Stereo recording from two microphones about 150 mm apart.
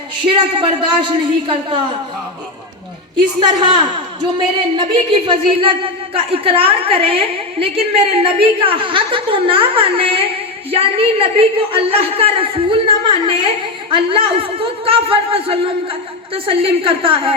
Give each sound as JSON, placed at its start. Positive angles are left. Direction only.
{"t": 0.3, "sound": "a woman's voice", "side_deg": -35}
{"t": 3.2, "sound": "a woman's voice", "side_deg": -30}